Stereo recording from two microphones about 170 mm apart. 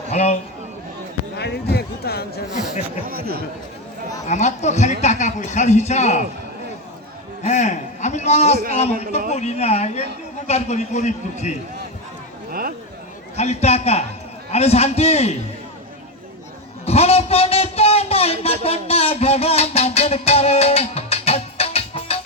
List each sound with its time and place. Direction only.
0.1 s a man's voice: 40° left (ahead or behind)
1.4 s speech: 75° left (ahead or behind)
3.1 s speech: 60° right (ahead or behind)
4.3 s speech: 45° left (ahead or behind)
7.4 s a man's voice: 45° left (ahead or behind)
12.5 s a sound: 60° right (ahead or behind)
13.3 s a man's voice: 40° left (ahead or behind)
16.8 s speech: 35° left (ahead or behind)